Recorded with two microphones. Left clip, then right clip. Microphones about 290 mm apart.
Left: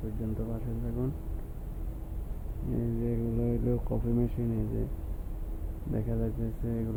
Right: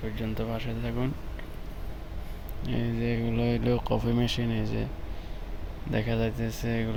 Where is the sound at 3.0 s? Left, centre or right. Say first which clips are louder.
Right 5 dB; centre.